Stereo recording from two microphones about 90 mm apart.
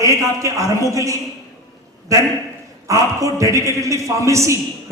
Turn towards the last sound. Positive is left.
turn(degrees=-35)  # may be behind; listen again after turning